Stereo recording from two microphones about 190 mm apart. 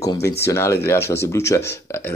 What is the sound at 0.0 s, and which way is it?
Speech, 20° left (ahead or behind).